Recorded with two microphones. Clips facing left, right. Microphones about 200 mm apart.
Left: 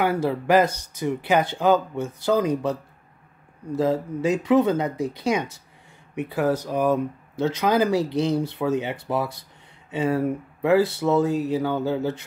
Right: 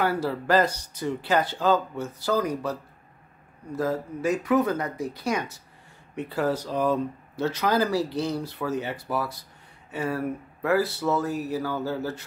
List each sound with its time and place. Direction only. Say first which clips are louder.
0.0 s speech: left 3 dB; 20° left (ahead or behind)